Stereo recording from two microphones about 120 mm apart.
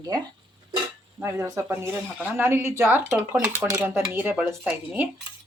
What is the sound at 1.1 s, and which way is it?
Speech, 20° right (ahead or behind).